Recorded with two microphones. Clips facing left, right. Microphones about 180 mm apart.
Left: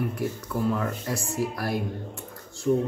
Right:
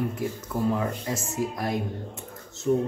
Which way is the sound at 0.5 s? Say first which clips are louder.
Right 1 dB; 20° right (ahead or behind).